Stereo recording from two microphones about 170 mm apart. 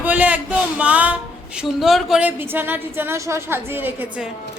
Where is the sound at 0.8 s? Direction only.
10° right (ahead or behind).